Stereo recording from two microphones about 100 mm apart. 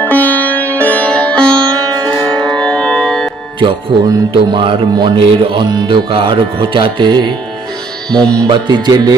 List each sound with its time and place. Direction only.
0.0 s music: 15° left (ahead or behind)
3.5 s music: 55° right (ahead or behind)
8.1 s music: 10° left (ahead or behind)
8.5 s music: 50° right (ahead or behind)